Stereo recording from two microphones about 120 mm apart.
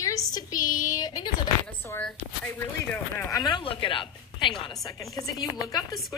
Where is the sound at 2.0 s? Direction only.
10° left (ahead or behind).